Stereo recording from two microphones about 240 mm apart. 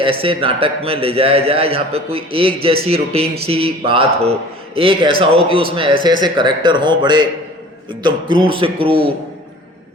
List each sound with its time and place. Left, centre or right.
0.0 s a man's voice: right